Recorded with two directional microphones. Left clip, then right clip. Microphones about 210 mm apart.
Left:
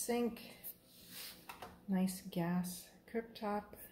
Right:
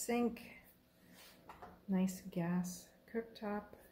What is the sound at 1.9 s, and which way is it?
A woman's voice, 5° left (ahead or behind).